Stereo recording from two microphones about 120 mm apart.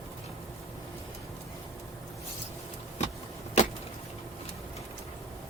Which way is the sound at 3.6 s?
70° left (ahead or behind).